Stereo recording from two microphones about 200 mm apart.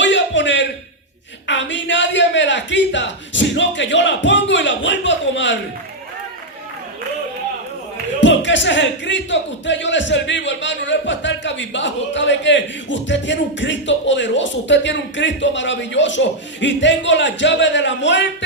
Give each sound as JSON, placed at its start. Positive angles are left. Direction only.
{"t": 0.0, "sound": "a sound", "side_deg": 65}
{"t": 1.5, "sound": "speech", "side_deg": 65}
{"t": 8.2, "sound": "speech", "side_deg": 65}